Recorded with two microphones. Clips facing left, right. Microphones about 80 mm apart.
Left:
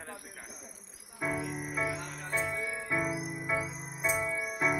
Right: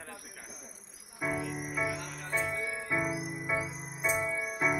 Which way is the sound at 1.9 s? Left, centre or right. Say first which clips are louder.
Even; left.